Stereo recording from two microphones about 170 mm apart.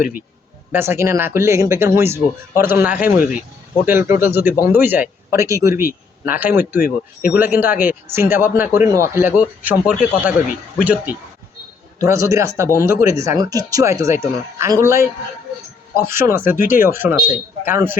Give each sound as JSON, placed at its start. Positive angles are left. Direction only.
{"t": 0.7, "sound": "speech", "side_deg": -15}
{"t": 6.8, "sound": "speech", "side_deg": 55}
{"t": 7.3, "sound": "speech", "side_deg": -10}